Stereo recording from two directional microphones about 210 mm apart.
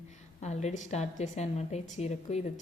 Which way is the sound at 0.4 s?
35° left (ahead or behind).